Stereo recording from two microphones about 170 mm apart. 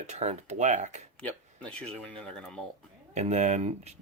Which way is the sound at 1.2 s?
5° left (ahead or behind).